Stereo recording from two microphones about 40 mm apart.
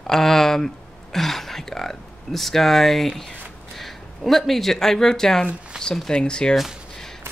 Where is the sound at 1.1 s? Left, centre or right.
Centre; by 6.5 s left.